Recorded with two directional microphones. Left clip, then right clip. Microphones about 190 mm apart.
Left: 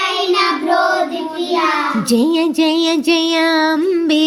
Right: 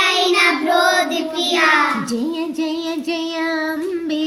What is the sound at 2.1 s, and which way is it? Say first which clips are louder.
Female singing: left 8 dB; 40° left (ahead or behind).